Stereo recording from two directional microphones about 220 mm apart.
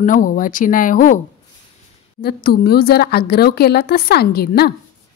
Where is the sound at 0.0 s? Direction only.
40° left (ahead or behind).